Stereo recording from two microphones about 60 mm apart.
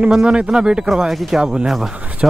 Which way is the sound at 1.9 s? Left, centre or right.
Centre.